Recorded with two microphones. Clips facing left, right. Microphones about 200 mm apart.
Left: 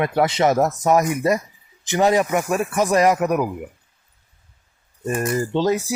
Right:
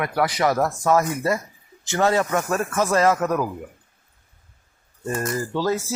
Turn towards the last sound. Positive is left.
turn(degrees=15)  # may be behind; listen again after turning